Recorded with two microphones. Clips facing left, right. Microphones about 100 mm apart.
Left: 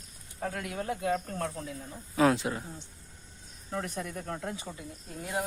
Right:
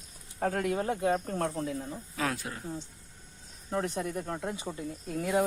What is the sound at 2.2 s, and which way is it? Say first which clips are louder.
Speech: left 9 dB; 25° left (ahead or behind).